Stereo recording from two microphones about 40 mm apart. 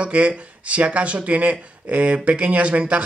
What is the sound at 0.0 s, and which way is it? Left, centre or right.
Speech, right.